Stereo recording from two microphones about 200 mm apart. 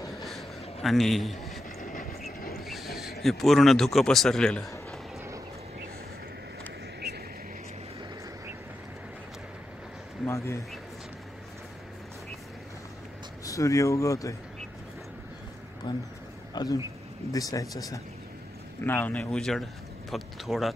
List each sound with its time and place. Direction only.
0.2 s a sound: centre (ahead or behind)
0.8 s a man's voice: centre (ahead or behind)
1.8 s vehicle: 40° left (ahead or behind)
2.6 s speech: centre (ahead or behind)
10.2 s speech: 15° left (ahead or behind)
13.4 s speech: 15° left (ahead or behind)
15.9 s speech: 20° left (ahead or behind); by 20.7 s centre (ahead or behind)